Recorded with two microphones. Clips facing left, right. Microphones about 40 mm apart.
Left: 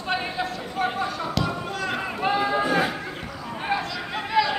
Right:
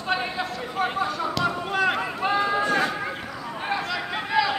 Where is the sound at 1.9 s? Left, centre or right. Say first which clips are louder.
Even; centre.